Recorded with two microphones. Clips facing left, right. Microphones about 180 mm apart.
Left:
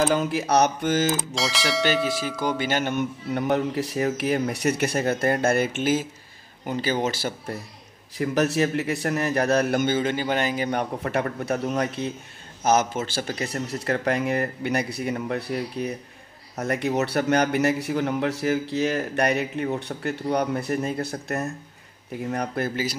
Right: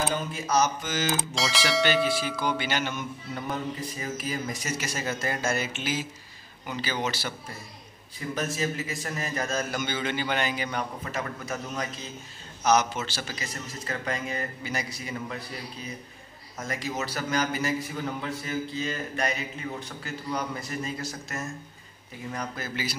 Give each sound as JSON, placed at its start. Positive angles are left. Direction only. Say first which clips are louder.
{"t": 0.1, "sound": "a man's voice", "louder": "left 6 dB", "side_deg": 75}
{"t": 1.3, "sound": "speech", "louder": "left 1 dB", "side_deg": 0}
{"t": 2.3, "sound": "a man's voice", "louder": "left 4 dB", "side_deg": 45}
{"t": 8.2, "sound": "a man's voice", "louder": "left 8 dB", "side_deg": 70}
{"t": 12.6, "sound": "a man's voice", "louder": "left 2 dB", "side_deg": 50}